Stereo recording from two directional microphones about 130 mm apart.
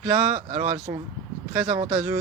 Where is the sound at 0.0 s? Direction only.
10° right (ahead or behind).